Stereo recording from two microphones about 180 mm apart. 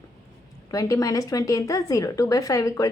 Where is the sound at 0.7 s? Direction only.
20° left (ahead or behind).